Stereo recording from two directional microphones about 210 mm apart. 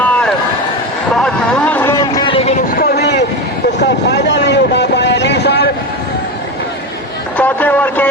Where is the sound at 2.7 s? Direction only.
45° left (ahead or behind).